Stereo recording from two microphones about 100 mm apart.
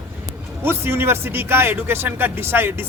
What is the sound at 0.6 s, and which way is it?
Speech, 25° right (ahead or behind).